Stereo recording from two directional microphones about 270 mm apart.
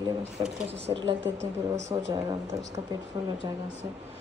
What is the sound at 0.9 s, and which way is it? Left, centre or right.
A woman's voice, centre.